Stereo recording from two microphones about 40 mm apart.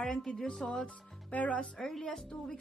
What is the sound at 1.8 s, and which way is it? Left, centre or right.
Speech, centre.